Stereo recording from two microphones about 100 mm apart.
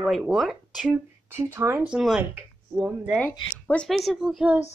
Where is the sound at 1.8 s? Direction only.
5° right (ahead or behind).